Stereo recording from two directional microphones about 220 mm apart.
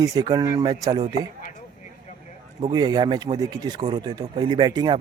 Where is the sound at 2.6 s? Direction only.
25° right (ahead or behind).